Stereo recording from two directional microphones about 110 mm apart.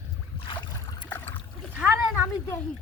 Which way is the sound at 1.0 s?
15° left (ahead or behind).